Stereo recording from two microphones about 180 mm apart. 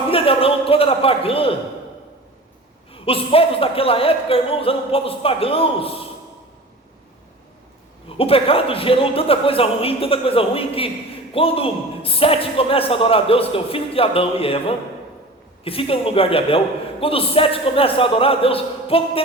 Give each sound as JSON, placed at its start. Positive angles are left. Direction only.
{"t": 0.1, "sound": "speech", "side_deg": 30}
{"t": 2.9, "sound": "speech", "side_deg": 30}
{"t": 8.2, "sound": "speech", "side_deg": 30}